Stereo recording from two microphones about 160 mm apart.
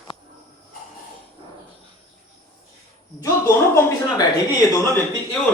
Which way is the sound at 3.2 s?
20° left (ahead or behind).